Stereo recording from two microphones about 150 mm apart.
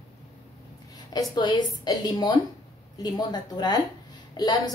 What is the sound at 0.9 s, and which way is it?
A woman's voice, 25° left (ahead or behind).